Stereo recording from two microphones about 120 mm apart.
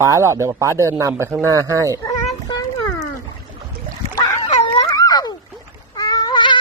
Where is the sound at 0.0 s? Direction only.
25° right (ahead or behind).